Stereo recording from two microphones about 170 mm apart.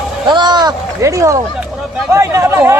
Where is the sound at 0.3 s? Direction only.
25° right (ahead or behind).